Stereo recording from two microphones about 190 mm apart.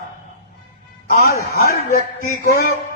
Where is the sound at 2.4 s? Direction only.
55° left (ahead or behind).